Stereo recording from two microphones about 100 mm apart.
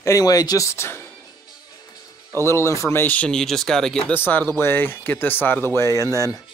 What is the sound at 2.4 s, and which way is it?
Speech, 25° left (ahead or behind).